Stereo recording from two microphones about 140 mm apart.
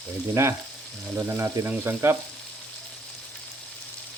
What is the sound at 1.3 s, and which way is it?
Speech, 15° right (ahead or behind).